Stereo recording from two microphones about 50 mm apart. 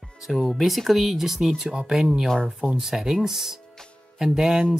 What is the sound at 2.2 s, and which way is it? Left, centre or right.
Speech, centre.